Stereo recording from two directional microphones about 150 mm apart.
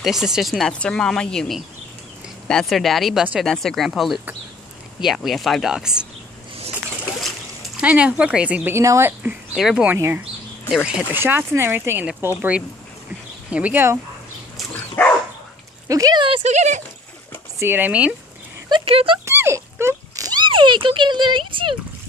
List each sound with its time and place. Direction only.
0.0 s speech: centre (ahead or behind)
7.2 s splash: centre (ahead or behind)
7.8 s a woman's voice: 10° right (ahead or behind)
9.9 s a woman's voice: 15° right (ahead or behind)
15.0 s dog: 15° left (ahead or behind)
15.9 s speech: 25° right (ahead or behind)
16.4 s speech: 50° right (ahead or behind)
17.6 s a woman's voice: 15° right (ahead or behind)
18.7 s speech: 35° right (ahead or behind)
19.2 s a sound: 15° right (ahead or behind); by 21.7 s 35° right (ahead or behind)